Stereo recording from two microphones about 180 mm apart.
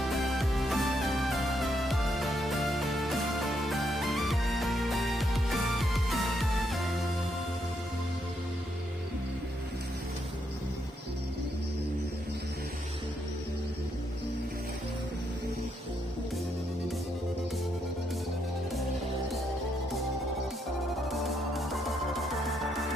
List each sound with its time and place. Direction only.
0.0 s music: centre (ahead or behind)
21.1 s music: centre (ahead or behind)